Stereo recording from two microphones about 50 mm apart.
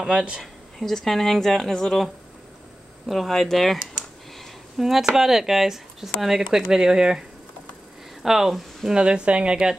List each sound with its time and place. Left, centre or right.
0.0 s speech: right
0.4 s speech: centre
3.1 s speech: centre
4.7 s speech: centre; by 9.6 s right